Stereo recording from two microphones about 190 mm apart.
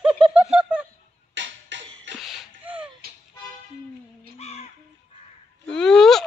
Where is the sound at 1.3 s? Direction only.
70° right (ahead or behind).